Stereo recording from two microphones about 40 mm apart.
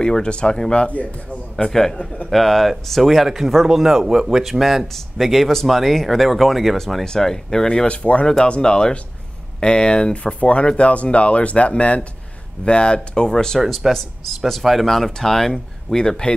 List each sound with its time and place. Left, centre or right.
0.0 s speech: left
1.7 s speech: centre
7.1 s speech: centre
7.9 s speech: left; by 13.6 s centre
13.6 s speech: centre
16.0 s speech: centre